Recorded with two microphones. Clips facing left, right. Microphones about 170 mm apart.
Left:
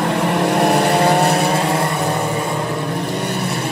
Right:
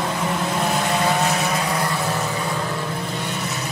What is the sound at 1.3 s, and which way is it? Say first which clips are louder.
Vehicle: left 6 dB; 30° left (ahead or behind).